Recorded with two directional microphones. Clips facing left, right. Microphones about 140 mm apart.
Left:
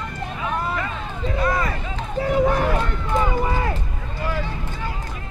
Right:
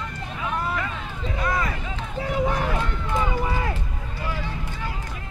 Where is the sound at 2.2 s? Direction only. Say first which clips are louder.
Left 5 dB; 50° left (ahead or behind).